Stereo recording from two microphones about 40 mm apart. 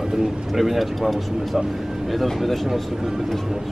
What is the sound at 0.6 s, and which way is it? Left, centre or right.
A man's voice, centre.